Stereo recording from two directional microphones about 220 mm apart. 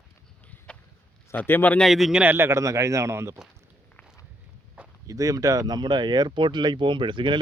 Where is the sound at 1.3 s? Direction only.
10° left (ahead or behind); by 3.4 s 15° right (ahead or behind).